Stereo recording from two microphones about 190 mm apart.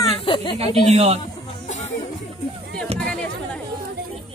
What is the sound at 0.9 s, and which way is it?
Speech, 35° right (ahead or behind).